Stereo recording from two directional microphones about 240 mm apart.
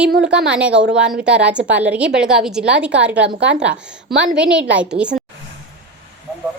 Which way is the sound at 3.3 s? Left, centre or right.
Right.